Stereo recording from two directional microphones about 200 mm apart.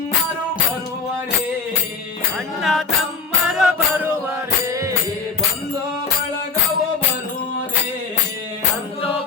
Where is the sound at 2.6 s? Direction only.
Centre (ahead or behind); by 4.9 s 15° right (ahead or behind).